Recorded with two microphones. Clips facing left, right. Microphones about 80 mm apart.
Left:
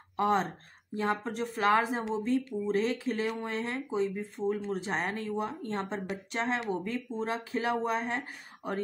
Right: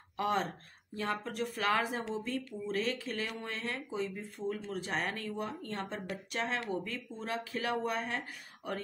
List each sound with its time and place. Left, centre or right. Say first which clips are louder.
0.2 s speech: left 5 dB; left